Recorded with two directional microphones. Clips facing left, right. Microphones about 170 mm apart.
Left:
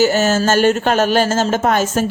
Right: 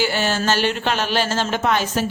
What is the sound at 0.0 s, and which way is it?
Speech, 45° left (ahead or behind).